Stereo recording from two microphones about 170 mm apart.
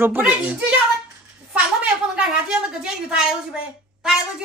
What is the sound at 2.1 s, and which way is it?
A woman's voice, 5° right (ahead or behind).